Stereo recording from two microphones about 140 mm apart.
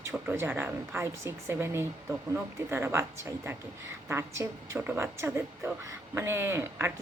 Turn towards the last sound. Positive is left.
turn(degrees=-20)  # may be behind; listen again after turning